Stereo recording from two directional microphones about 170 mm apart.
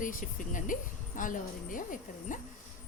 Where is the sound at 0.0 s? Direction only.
50° left (ahead or behind).